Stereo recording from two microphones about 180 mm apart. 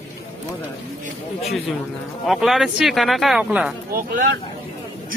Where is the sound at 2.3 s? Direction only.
Centre (ahead or behind).